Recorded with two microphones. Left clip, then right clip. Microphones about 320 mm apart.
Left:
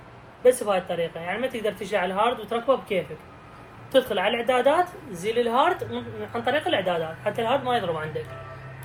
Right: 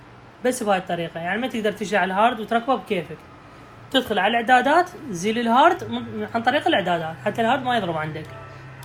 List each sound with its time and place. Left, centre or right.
0.4 s a woman's voice: right